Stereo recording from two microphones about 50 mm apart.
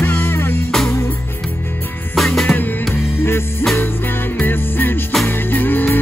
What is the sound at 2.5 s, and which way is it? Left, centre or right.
Music, left.